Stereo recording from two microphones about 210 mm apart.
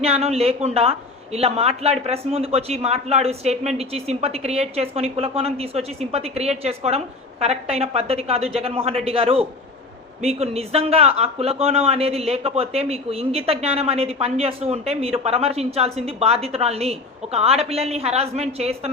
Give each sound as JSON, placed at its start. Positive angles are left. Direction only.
{"t": 0.0, "sound": "speech", "side_deg": -30}